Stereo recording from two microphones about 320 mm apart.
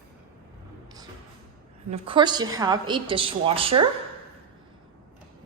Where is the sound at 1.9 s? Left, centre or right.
Centre.